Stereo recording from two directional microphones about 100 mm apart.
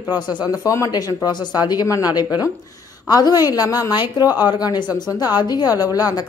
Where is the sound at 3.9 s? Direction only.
50° left (ahead or behind).